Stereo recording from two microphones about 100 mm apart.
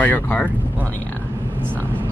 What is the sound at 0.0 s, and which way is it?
Speech, 20° left (ahead or behind).